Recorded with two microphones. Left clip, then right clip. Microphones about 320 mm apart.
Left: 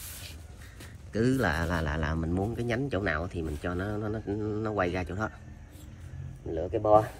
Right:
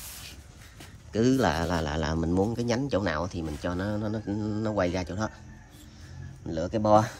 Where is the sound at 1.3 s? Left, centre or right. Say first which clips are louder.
Right 3 dB; right.